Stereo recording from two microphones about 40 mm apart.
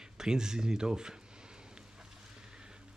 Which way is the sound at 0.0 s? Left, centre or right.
Centre.